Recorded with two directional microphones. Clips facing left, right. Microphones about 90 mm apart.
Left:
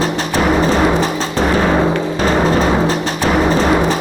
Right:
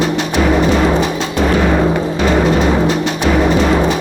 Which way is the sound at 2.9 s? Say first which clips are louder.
Right 1 dB; 35° left (ahead or behind).